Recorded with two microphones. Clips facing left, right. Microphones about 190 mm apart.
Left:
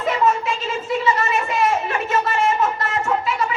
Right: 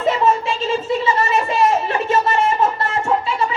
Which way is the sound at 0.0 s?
30° right (ahead or behind).